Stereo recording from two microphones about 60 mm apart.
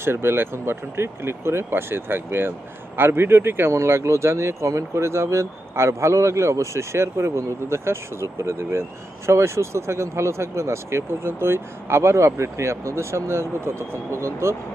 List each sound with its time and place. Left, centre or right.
0.0 s speech: right